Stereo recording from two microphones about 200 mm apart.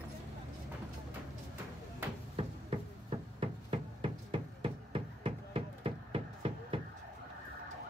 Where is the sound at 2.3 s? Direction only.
30° right (ahead or behind).